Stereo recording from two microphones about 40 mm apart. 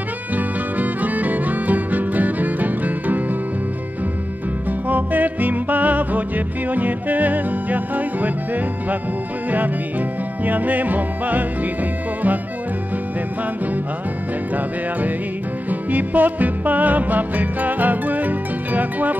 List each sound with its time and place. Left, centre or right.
0.4 s music: right
4.6 s music: right
10.4 s music: right
15.7 s music: right